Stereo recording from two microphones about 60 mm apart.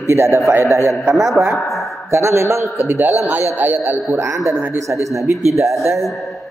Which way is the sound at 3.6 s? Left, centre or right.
Right.